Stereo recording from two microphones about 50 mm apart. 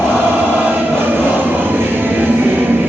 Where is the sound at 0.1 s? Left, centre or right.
Right.